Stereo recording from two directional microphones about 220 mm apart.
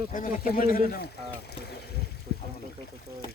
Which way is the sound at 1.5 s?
45° left (ahead or behind).